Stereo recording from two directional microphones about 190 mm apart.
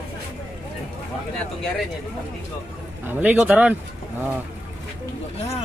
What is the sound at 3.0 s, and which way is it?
Speech, 10° right (ahead or behind).